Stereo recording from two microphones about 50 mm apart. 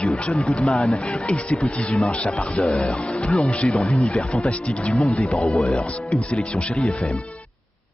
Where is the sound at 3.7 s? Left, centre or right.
Centre.